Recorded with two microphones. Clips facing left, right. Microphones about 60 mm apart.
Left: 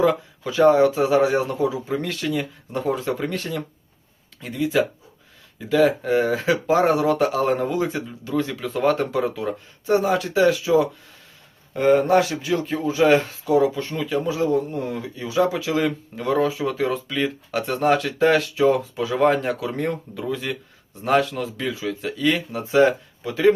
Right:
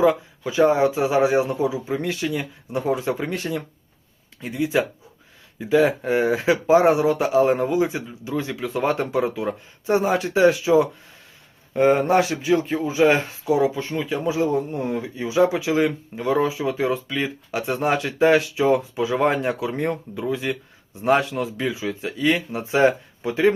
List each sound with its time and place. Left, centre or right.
0.0 s speech: centre